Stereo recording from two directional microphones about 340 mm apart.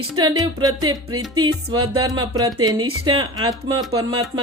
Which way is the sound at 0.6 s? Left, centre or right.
Centre.